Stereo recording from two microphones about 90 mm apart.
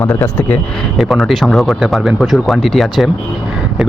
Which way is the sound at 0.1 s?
25° left (ahead or behind).